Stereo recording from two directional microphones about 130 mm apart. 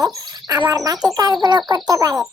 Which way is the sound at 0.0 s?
30° right (ahead or behind).